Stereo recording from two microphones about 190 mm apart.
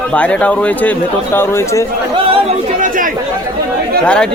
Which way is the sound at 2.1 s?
30° right (ahead or behind).